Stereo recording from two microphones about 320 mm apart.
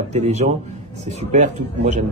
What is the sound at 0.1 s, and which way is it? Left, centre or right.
Speech, right.